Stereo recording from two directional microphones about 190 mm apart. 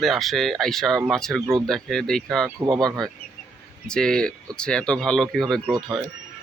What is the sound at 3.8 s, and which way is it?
Speech, 5° left (ahead or behind).